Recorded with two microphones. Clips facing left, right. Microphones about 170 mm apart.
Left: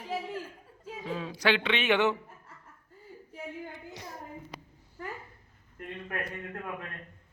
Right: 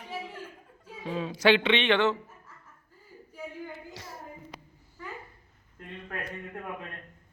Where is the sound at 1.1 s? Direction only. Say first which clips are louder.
Right 5 dB; 20° right (ahead or behind).